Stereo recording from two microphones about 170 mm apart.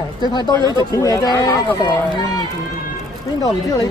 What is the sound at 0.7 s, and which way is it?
Speech, 20° left (ahead or behind).